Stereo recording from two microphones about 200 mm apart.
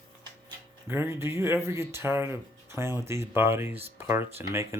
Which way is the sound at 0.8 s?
10° right (ahead or behind).